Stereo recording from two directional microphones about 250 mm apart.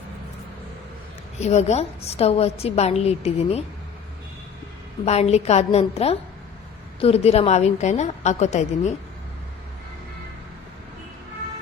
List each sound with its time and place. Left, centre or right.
1.4 s a woman's voice: left
5.0 s a woman's voice: left